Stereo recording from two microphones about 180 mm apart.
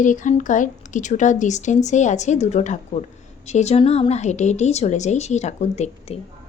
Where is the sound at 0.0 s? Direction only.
45° left (ahead or behind).